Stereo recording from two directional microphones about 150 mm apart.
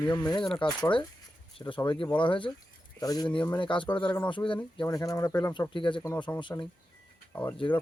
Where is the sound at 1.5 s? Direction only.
30° left (ahead or behind).